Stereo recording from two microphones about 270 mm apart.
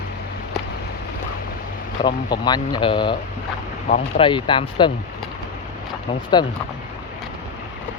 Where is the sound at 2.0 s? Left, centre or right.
Centre.